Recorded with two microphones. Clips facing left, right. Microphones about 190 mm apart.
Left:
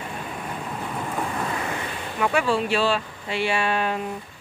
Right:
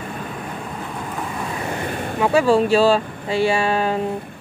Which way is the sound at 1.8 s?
50° right (ahead or behind).